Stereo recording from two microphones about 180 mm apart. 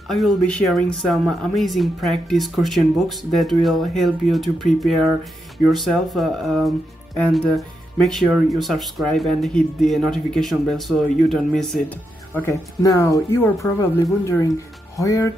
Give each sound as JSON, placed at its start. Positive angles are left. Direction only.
{"t": 0.1, "sound": "speech", "side_deg": 0}
{"t": 12.4, "sound": "speech", "side_deg": 15}